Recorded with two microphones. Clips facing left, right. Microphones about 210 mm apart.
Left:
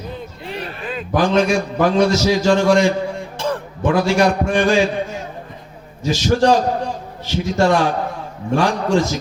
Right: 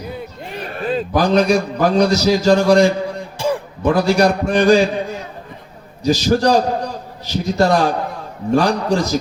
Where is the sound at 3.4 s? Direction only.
10° right (ahead or behind).